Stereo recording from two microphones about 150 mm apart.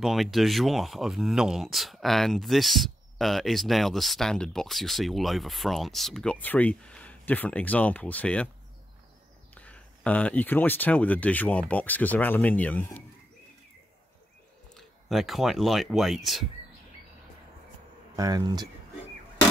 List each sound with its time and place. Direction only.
0.0 s speech: centre (ahead or behind)
9.5 s speech: 10° left (ahead or behind)
14.7 s speech: centre (ahead or behind)
18.1 s speech: 25° right (ahead or behind)